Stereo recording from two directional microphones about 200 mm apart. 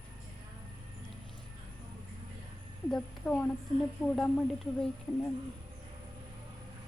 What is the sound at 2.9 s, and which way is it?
Speech, 5° left (ahead or behind).